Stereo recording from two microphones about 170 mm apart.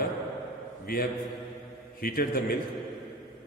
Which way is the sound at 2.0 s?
60° left (ahead or behind).